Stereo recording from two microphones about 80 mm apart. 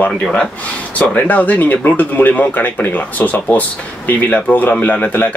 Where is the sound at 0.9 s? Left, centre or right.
Centre.